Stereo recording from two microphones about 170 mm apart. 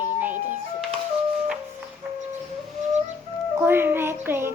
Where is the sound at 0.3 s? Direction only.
45° right (ahead or behind).